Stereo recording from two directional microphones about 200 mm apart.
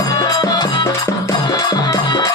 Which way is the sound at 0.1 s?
20° left (ahead or behind).